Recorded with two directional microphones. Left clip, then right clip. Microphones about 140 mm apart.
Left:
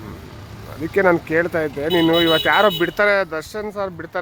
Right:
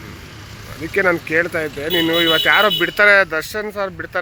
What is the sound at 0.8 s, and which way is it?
Speech, 35° left (ahead or behind).